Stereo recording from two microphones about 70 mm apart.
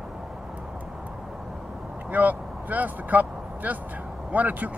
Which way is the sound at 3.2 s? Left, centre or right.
Centre.